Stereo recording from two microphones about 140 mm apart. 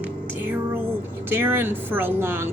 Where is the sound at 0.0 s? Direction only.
15° right (ahead or behind).